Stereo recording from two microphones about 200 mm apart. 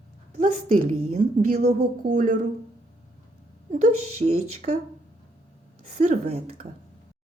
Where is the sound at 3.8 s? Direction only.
90° right.